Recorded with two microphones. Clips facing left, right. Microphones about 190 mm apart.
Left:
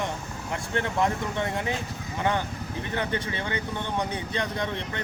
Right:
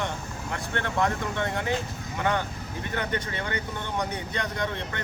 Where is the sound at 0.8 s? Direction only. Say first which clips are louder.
Right 1 dB; 15° left (ahead or behind).